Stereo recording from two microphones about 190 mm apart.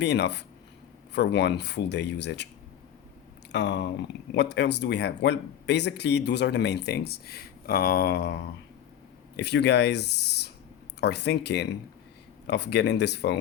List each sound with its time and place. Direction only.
0.0 s speech: 65° left (ahead or behind)
3.5 s speech: 65° left (ahead or behind)